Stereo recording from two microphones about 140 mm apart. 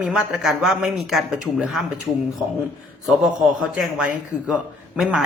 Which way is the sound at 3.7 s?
10° right (ahead or behind).